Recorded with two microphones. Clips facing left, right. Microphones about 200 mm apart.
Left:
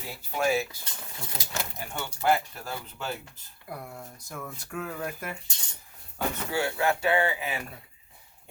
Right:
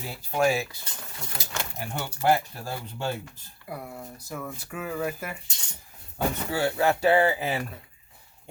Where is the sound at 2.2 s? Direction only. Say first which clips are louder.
Right 2 dB; 30° right (ahead or behind).